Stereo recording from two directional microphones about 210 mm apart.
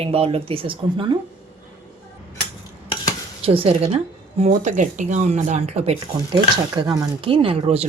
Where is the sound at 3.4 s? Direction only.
25° right (ahead or behind).